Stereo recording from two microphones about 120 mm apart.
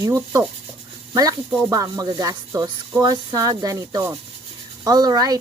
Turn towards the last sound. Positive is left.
turn(degrees=-30)  # may be behind; listen again after turning